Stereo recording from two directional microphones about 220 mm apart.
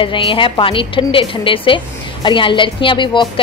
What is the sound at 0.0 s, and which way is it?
A woman's voice, 25° left (ahead or behind).